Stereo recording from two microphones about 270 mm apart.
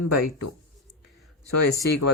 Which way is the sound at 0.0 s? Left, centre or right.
Left.